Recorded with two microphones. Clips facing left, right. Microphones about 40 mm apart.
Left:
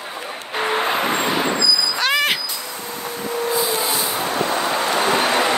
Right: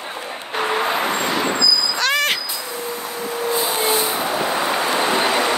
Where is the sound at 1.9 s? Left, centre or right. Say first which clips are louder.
Even; centre.